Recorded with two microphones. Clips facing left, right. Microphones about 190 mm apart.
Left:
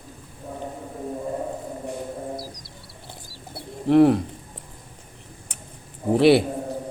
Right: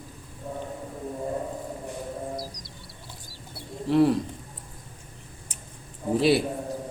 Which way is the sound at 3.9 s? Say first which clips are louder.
Left 5 dB; 60° left (ahead or behind).